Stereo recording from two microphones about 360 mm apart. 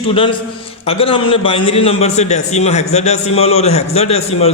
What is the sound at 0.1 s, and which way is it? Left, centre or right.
Speech, centre.